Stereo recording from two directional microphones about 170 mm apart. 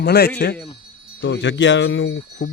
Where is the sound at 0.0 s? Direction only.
70° left (ahead or behind).